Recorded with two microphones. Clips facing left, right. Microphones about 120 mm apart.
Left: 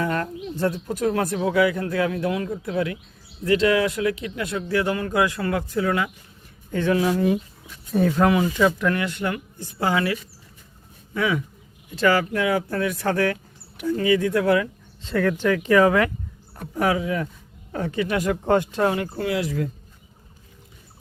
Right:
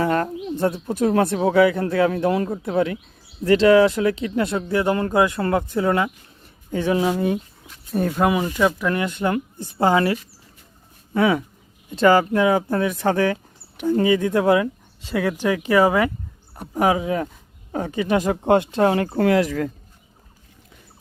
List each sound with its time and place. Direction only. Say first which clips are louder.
0.0 s speech: right 4 dB; 35° right (ahead or behind)
0.5 s speech: right 2 dB; 25° right (ahead or behind)
6.7 s speech: right 1 dB; 15° right (ahead or behind)
7.9 s speech: left 1 dB; 5° right (ahead or behind)
8.9 s speech: right 3 dB; 20° right (ahead or behind); by 11.4 s 40° right (ahead or behind)
11.9 s speech: right 5 dB; 25° right (ahead or behind)
15.0 s speech: even; 10° right (ahead or behind)
16.6 s speech: right 3 dB; 20° right (ahead or behind)
18.8 s speech: right 4 dB; 40° right (ahead or behind)
19.5 s a man's voice: right 2 dB; 70° right (ahead or behind)